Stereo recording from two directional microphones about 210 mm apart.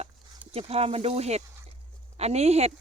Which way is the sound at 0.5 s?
30° right (ahead or behind).